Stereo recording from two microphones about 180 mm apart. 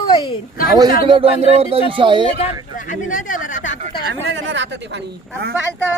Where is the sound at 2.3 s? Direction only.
40° left (ahead or behind).